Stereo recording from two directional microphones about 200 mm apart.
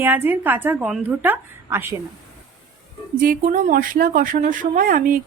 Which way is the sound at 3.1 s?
45° right (ahead or behind).